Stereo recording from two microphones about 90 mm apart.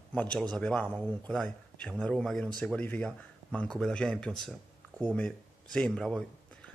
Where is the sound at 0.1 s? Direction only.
15° left (ahead or behind).